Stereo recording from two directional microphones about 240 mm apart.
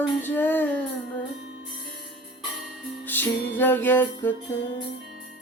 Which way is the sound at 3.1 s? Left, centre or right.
Centre.